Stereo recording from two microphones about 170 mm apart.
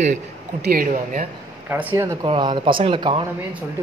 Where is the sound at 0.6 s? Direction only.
55° right (ahead or behind).